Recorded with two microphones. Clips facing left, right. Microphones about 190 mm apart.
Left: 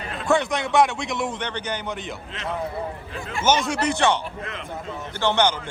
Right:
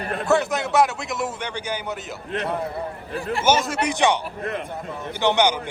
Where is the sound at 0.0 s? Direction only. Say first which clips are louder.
Right 5 dB; 55° right (ahead or behind).